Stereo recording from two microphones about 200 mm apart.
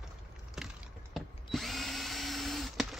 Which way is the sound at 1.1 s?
Centre (ahead or behind).